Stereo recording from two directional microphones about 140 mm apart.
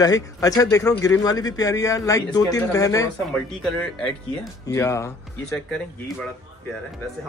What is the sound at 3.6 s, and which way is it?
Speech, 5° left (ahead or behind).